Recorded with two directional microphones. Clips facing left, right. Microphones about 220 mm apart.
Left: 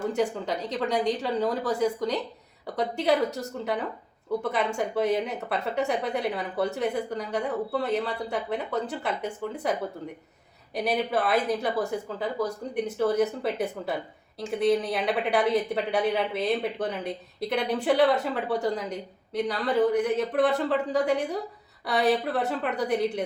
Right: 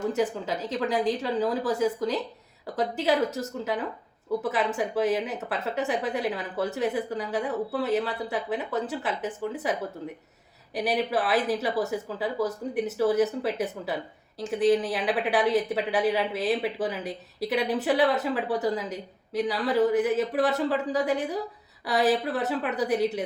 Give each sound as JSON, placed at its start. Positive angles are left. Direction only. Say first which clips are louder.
{"t": 0.1, "sound": "a woman's voice", "louder": "even", "side_deg": 0}
{"t": 10.8, "sound": "a woman's voice", "louder": "even", "side_deg": -5}